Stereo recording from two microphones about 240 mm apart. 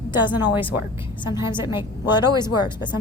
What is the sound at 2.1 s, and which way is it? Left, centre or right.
Speech, centre.